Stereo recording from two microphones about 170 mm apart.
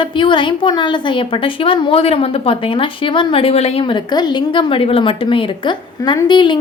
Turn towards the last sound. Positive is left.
turn(degrees=25)  # may be behind; listen again after turning